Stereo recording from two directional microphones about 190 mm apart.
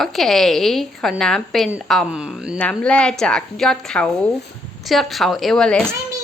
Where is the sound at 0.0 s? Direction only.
Centre (ahead or behind).